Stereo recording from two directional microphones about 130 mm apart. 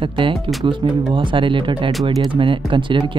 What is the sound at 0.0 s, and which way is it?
Speech, 40° right (ahead or behind).